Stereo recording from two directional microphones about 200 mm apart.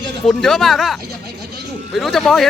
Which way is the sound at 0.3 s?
Centre (ahead or behind).